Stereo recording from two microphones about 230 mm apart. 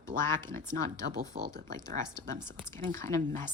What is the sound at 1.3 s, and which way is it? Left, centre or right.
Speech, right.